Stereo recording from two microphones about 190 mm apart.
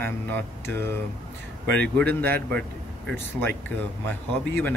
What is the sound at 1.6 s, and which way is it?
Speech, 60° right (ahead or behind).